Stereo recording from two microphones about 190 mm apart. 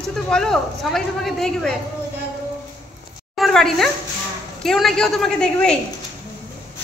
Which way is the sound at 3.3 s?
Centre (ahead or behind).